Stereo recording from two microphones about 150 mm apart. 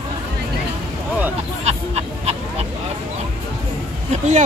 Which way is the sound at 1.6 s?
45° right (ahead or behind).